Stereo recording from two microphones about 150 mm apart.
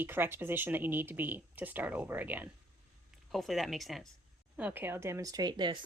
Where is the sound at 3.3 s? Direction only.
Centre (ahead or behind).